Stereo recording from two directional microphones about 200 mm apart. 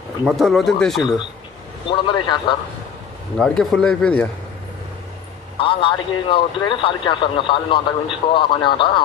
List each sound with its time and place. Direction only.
0.2 s speech: centre (ahead or behind)
1.9 s a man's voice: 25° left (ahead or behind)
3.3 s speech: 5° left (ahead or behind)
5.6 s a man's voice: 25° left (ahead or behind)